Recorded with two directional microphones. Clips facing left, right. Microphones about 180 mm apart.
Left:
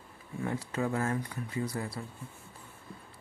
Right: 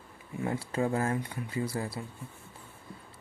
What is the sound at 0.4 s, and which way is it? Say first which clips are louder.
Speech: right 2 dB; 30° right (ahead or behind).